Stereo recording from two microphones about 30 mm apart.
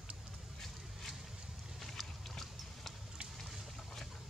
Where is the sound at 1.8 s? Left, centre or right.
Centre.